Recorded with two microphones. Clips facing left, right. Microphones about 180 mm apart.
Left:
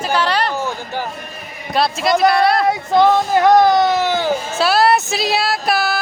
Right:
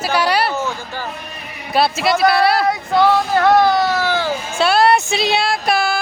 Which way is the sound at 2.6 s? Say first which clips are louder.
Left 1 dB; 20° left (ahead or behind).